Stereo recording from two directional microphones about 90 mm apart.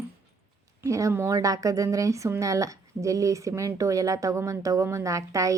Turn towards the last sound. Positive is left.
turn(degrees=-35)  # may be behind; listen again after turning